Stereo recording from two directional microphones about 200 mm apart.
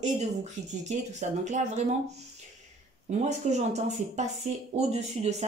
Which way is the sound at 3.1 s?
35° right (ahead or behind).